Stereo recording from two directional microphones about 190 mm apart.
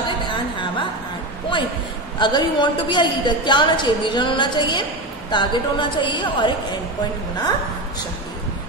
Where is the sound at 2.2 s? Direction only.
25° left (ahead or behind).